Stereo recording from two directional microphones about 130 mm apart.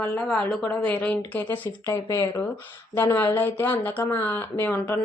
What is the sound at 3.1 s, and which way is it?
Speech, 15° left (ahead or behind).